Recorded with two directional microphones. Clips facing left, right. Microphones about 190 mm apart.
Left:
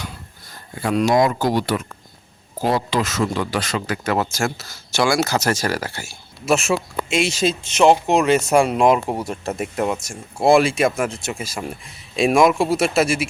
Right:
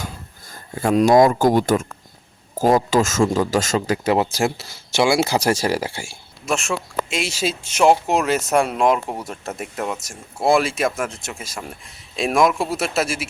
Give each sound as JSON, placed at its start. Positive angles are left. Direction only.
{"t": 0.5, "sound": "speech", "side_deg": -45}
{"t": 3.9, "sound": "speech", "side_deg": -25}
{"t": 6.4, "sound": "speech", "side_deg": 5}